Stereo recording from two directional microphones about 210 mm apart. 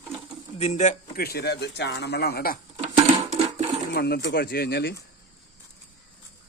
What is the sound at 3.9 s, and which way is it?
Speech, 50° left (ahead or behind).